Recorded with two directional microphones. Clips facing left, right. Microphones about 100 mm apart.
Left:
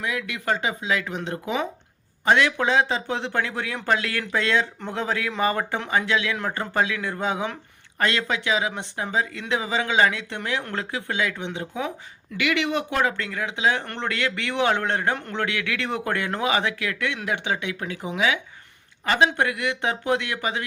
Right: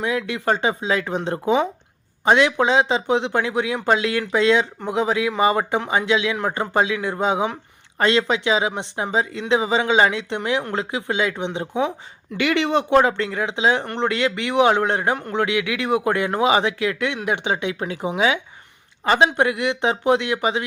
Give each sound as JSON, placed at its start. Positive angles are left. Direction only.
{"t": 0.0, "sound": "speech", "side_deg": -30}
{"t": 2.2, "sound": "speech", "side_deg": -20}